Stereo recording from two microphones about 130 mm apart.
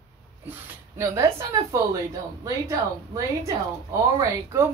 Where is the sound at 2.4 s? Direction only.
25° right (ahead or behind).